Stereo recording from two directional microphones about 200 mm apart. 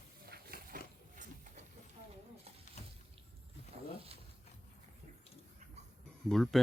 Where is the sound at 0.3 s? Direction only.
45° right (ahead or behind).